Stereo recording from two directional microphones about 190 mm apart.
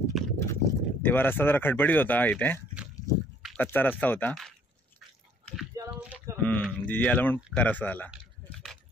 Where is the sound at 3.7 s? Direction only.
10° left (ahead or behind).